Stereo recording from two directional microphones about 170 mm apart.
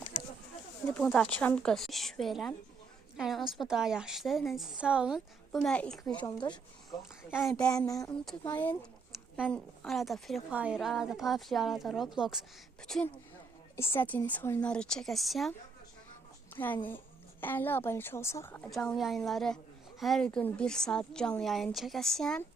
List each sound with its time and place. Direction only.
0.9 s a woman's voice: 10° left (ahead or behind)
6.2 s speech: 25° left (ahead or behind)
7.3 s a woman's voice: centre (ahead or behind)
7.7 s speech: 20° left (ahead or behind)
9.5 s a woman's voice: centre (ahead or behind)
13.7 s a woman's voice: 15° left (ahead or behind)
16.6 s a woman's voice: 10° left (ahead or behind)
18.7 s a woman's voice: centre (ahead or behind)